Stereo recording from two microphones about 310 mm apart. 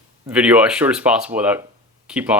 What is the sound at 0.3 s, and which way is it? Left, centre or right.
Speech, centre.